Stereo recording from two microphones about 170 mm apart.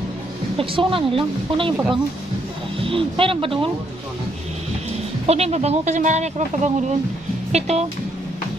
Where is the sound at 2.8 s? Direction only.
30° right (ahead or behind).